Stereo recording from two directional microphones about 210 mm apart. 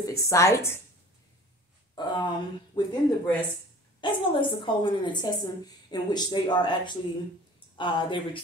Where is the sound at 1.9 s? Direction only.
20° left (ahead or behind).